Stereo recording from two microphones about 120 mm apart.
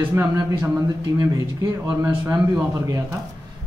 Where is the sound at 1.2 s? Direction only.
30° right (ahead or behind).